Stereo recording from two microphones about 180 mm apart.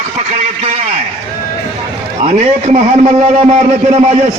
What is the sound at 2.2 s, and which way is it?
A man's voice, 35° right (ahead or behind).